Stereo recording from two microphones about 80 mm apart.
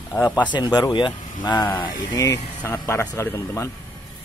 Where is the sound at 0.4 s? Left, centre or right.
Left.